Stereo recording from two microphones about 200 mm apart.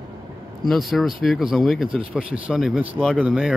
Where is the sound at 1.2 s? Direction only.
Centre (ahead or behind).